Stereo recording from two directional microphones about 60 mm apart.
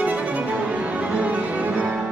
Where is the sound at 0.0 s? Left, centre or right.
Right.